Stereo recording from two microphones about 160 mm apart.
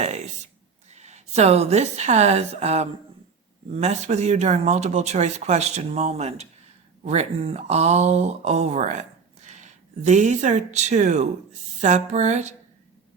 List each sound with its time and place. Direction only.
0.0 s speech: 45° right (ahead or behind)